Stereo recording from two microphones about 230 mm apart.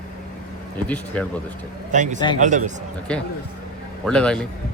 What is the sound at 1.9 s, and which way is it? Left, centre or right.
Speech, right.